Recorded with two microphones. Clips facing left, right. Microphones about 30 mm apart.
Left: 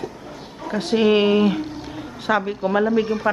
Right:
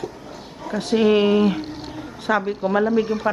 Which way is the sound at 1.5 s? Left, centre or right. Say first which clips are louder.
Left 2 dB; centre.